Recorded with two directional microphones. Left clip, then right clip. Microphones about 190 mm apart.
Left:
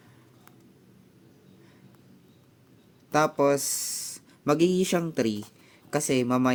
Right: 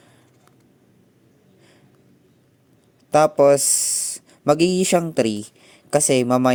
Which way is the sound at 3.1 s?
30° right (ahead or behind).